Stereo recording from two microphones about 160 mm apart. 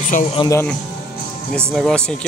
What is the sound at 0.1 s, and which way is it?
Speech, 55° left (ahead or behind).